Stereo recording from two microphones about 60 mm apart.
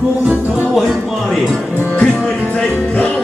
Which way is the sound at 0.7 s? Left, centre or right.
Centre.